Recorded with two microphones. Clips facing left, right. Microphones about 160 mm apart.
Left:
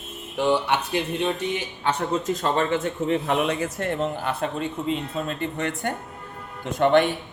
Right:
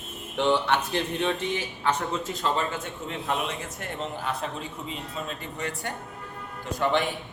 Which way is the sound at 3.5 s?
Centre (ahead or behind).